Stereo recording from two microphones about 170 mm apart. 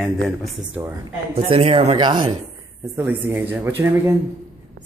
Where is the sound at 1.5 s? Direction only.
30° right (ahead or behind).